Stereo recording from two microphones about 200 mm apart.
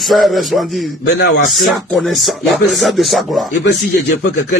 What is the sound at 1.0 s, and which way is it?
Speech, 55° left (ahead or behind).